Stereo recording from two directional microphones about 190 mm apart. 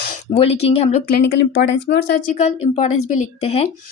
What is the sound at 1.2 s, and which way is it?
Speech, 65° left (ahead or behind).